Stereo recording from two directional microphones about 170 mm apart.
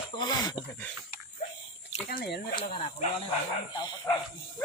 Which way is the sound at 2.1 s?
60° left (ahead or behind).